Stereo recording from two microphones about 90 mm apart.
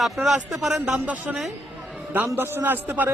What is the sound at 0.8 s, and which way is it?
Speech, 15° right (ahead or behind).